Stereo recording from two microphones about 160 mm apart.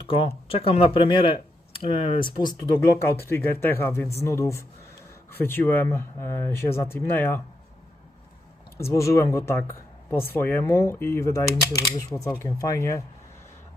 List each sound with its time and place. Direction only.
0.1 s speech: 35° left (ahead or behind)
3.2 s speech: 15° left (ahead or behind)
8.8 s speech: 20° left (ahead or behind)